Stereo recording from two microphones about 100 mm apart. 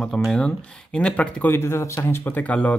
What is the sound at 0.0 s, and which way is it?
Speech, 5° left (ahead or behind).